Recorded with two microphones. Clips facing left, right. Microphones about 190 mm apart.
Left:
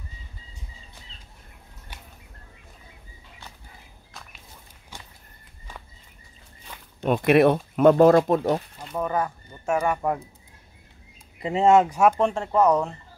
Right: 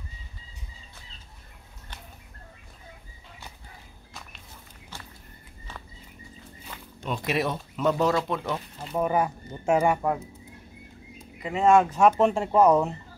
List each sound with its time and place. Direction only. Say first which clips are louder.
4.1 s a sound: right 1 dB; centre (ahead or behind)
4.9 s a sound: even; 15° left (ahead or behind)
7.0 s speech: left 10 dB; 60° left (ahead or behind)
8.8 s speech: right 4 dB; 10° right (ahead or behind)
11.4 s speech: left 2 dB; 25° left (ahead or behind)
12.1 s speech: right 1 dB; 5° right (ahead or behind)